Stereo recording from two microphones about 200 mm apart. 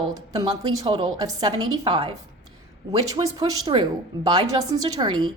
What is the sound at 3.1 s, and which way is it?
A woman's voice, 20° right (ahead or behind).